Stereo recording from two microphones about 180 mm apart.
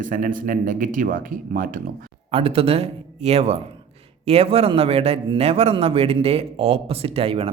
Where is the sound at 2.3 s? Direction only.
30° right (ahead or behind).